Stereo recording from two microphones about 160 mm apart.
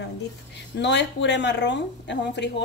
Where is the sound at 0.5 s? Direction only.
90° left.